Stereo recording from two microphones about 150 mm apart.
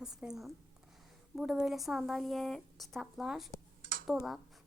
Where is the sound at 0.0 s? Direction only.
5° right (ahead or behind).